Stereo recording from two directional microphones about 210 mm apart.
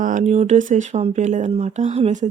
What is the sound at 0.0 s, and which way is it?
Speech, 35° right (ahead or behind).